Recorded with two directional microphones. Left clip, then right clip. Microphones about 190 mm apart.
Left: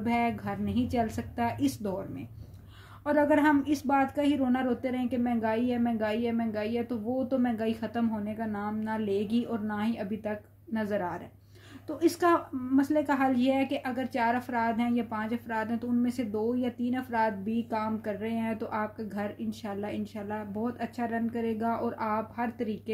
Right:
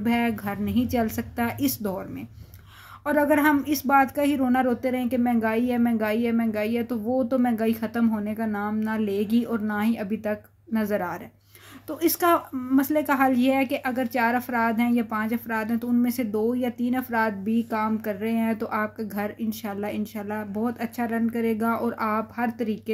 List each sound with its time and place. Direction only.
0.0 s speech: 35° right (ahead or behind)
3.1 s speech: 35° right (ahead or behind)